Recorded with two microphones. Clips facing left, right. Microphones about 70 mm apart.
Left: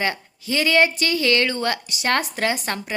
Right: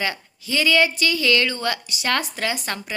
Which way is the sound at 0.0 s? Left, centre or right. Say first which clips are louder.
Left 2 dB; left.